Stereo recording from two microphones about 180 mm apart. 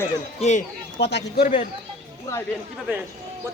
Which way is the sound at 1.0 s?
70° left (ahead or behind).